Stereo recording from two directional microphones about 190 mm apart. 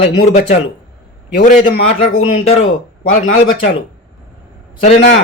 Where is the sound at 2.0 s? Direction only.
35° left (ahead or behind).